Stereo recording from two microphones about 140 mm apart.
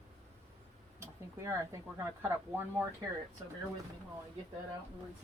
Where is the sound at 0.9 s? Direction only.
20° right (ahead or behind).